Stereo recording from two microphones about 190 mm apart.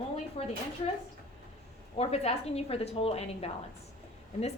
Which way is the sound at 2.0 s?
35° left (ahead or behind).